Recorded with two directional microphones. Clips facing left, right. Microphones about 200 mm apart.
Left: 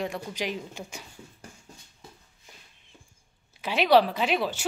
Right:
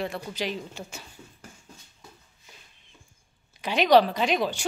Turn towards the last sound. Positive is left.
turn(degrees=5)  # may be behind; listen again after turning